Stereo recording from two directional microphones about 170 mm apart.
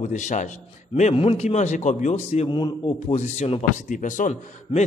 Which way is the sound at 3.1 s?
40° left (ahead or behind).